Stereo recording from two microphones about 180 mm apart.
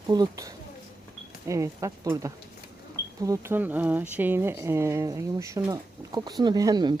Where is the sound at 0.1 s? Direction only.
20° right (ahead or behind).